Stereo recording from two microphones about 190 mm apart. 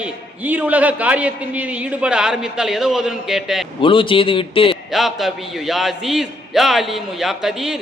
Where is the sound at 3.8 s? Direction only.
25° left (ahead or behind).